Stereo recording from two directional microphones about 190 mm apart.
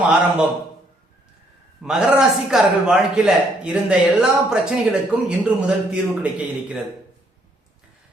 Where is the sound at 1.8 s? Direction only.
5° right (ahead or behind).